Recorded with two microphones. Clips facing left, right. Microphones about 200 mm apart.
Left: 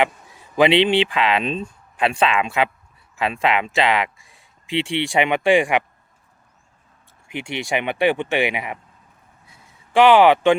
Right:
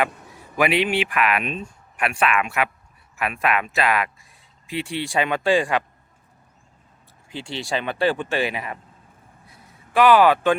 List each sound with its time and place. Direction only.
0.5 s speech: 25° left (ahead or behind)
7.3 s speech: 20° left (ahead or behind)
9.9 s speech: 25° left (ahead or behind)